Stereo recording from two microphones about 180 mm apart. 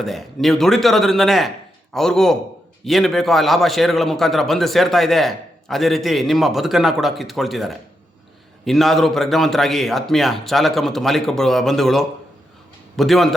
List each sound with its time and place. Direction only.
0.0 s a man's voice: centre (ahead or behind)